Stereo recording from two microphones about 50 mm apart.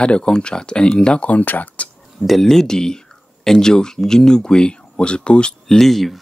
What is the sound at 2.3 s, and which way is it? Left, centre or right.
Speech, centre.